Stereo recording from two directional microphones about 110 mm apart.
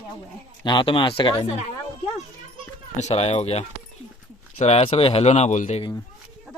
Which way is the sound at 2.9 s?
80° left.